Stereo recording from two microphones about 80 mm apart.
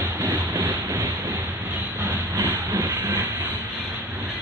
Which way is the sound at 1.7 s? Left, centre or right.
Right.